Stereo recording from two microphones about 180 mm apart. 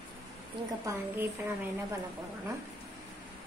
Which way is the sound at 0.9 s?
10° right (ahead or behind).